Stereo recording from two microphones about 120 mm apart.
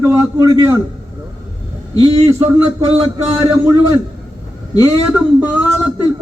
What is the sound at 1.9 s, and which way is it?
Speech, 55° right (ahead or behind).